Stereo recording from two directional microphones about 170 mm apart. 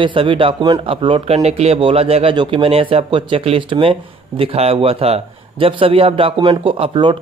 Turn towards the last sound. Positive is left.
turn(degrees=-30)  # may be behind; listen again after turning